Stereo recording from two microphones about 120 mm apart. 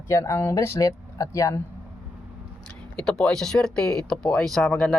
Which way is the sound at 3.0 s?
5° left (ahead or behind).